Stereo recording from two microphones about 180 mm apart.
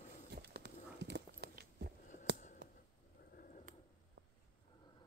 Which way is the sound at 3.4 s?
45° left (ahead or behind).